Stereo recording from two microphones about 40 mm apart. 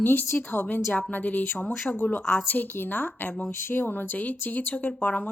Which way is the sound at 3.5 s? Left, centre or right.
Left.